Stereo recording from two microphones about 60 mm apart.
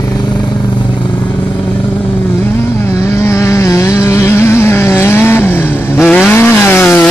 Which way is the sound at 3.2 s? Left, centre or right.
Left.